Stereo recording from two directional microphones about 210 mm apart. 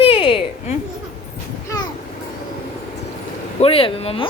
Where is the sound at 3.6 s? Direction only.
25° left (ahead or behind).